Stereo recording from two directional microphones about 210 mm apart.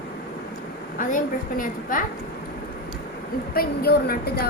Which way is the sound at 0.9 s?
40° left (ahead or behind).